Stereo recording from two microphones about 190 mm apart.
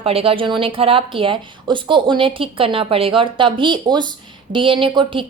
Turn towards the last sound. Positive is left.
turn(degrees=-25)  # may be behind; listen again after turning